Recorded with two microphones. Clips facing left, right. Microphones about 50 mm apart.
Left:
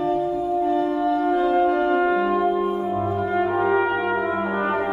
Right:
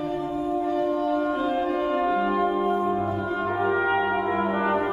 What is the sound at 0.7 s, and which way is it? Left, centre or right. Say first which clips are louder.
French horn: left 3 dB; centre.